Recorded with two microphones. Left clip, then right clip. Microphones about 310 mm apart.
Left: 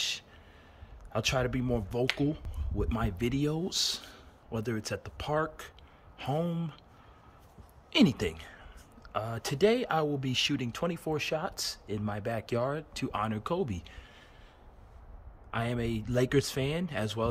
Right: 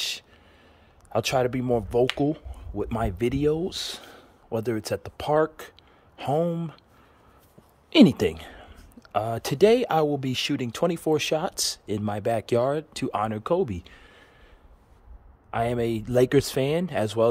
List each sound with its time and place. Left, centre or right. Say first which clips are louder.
1.1 s speech: right 7 dB; centre
7.9 s speech: right 9 dB; right
15.5 s speech: right 8 dB; centre